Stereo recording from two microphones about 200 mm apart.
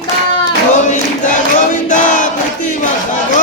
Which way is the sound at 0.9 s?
40° left (ahead or behind).